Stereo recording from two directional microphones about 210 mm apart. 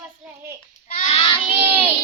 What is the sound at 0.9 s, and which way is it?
Child singing, 35° left (ahead or behind).